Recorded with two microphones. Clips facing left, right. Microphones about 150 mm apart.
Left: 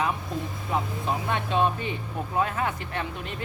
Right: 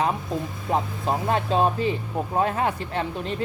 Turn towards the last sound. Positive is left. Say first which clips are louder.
# right 5 dB
turn(degrees=-35)  # may be behind; listen again after turning